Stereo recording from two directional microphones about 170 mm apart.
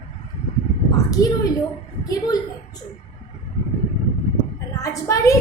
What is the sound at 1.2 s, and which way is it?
Speech, 20° left (ahead or behind).